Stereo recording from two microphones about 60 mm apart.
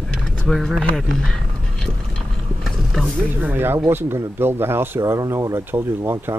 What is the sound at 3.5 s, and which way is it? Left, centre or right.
Speech, right.